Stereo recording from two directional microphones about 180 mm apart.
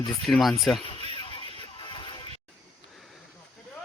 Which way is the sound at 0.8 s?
30° left (ahead or behind).